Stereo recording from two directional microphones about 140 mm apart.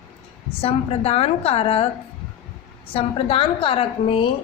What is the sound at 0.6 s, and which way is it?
A woman's voice, 45° left (ahead or behind).